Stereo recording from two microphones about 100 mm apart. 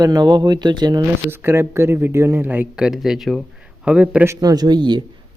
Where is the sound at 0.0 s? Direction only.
40° right (ahead or behind).